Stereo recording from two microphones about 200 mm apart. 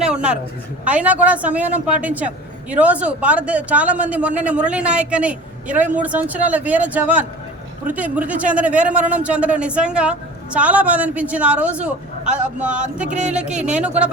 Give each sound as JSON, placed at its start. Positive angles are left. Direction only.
{"t": 0.0, "sound": "a sound", "side_deg": -5}
{"t": 0.9, "sound": "a man's voice", "side_deg": -5}
{"t": 13.1, "sound": "speech", "side_deg": -35}
{"t": 13.3, "sound": "speech", "side_deg": -5}